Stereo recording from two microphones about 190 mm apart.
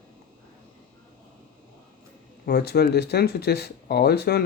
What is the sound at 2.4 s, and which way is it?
Speech, 60° left (ahead or behind).